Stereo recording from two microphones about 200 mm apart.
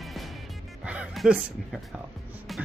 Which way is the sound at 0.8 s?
5° right (ahead or behind).